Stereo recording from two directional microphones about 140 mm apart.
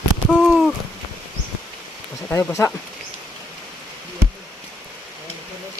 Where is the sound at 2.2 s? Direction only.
15° left (ahead or behind).